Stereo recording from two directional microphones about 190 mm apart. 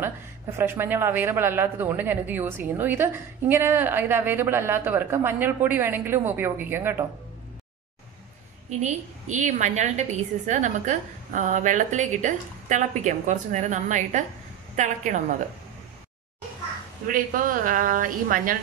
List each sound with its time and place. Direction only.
0.0 s a woman's voice: 10° right (ahead or behind)
8.6 s a woman's voice: 40° right (ahead or behind)
17.1 s speech: 45° right (ahead or behind)